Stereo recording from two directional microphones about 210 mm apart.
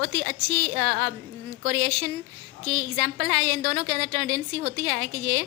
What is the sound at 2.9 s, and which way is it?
A woman's voice, 40° right (ahead or behind).